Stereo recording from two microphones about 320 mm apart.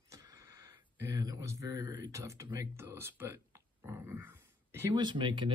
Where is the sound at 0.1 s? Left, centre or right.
Centre.